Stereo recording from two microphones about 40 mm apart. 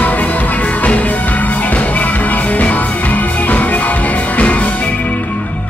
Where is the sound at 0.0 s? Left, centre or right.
Left.